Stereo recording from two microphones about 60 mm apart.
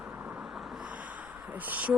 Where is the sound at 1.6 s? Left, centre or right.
Right.